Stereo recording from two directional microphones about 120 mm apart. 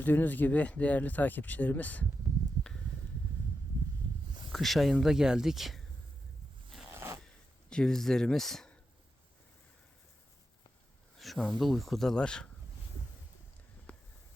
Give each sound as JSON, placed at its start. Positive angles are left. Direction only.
{"t": 0.0, "sound": "speech", "side_deg": 15}
{"t": 4.5, "sound": "speech", "side_deg": 0}
{"t": 6.9, "sound": "zipper", "side_deg": -20}
{"t": 7.7, "sound": "speech", "side_deg": 5}
{"t": 11.2, "sound": "speech", "side_deg": 0}